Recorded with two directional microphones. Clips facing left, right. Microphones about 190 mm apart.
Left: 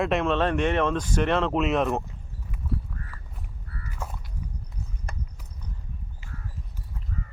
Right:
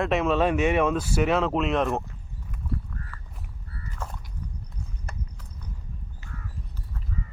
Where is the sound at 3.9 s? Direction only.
5° left (ahead or behind).